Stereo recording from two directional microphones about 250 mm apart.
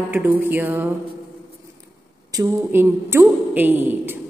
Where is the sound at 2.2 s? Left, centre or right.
Centre.